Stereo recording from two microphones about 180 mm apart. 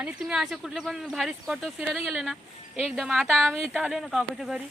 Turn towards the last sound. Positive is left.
turn(degrees=0)  # may be behind; listen again after turning